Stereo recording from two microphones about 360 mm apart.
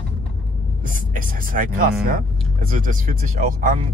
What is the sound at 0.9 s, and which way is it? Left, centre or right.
Speech, right.